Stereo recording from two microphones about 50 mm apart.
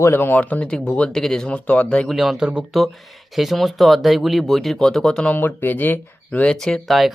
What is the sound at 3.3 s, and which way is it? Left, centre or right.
Speech, centre.